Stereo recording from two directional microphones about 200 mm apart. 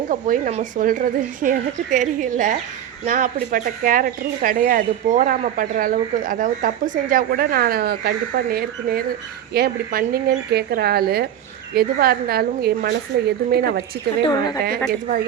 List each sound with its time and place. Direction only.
0.1 s a woman's voice: 40° right (ahead or behind)
14.3 s speech: 20° left (ahead or behind)